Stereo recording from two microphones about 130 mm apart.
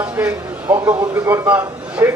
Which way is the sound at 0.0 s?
10° right (ahead or behind).